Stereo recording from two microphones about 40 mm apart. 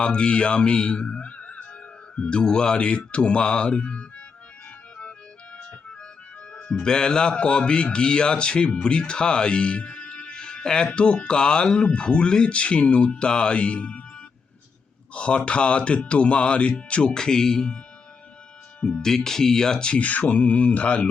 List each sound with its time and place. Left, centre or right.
0.0 s speech: left
5.5 s music: left
6.5 s speech: centre
15.1 s speech: left
18.8 s speech: left
19.0 s speech: centre
20.0 s speech: left